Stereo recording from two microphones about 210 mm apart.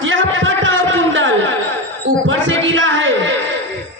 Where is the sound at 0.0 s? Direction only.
65° right (ahead or behind).